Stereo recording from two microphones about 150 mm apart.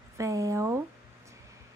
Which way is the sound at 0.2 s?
20° right (ahead or behind).